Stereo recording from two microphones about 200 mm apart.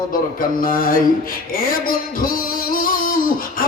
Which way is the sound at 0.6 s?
45° left (ahead or behind).